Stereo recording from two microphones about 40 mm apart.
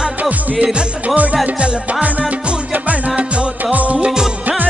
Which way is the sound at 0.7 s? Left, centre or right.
Right.